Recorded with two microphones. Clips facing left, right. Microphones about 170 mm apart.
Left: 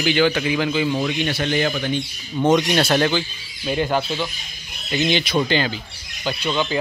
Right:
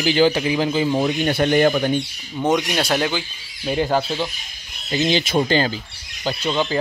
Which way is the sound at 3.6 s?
30° right (ahead or behind).